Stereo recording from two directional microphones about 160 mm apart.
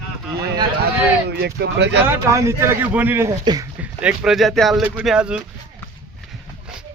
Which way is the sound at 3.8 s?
5° right (ahead or behind).